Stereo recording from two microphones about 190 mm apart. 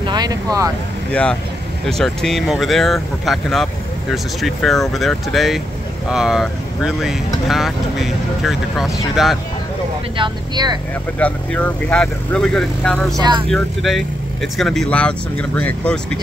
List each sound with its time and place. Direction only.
0.0 s vehicle: 20° right (ahead or behind)
1.1 s speech: 5° left (ahead or behind)
10.1 s speech: 25° right (ahead or behind)
11.1 s speech: 5° left (ahead or behind)
13.1 s speech: 20° right (ahead or behind)
13.5 s speech: centre (ahead or behind)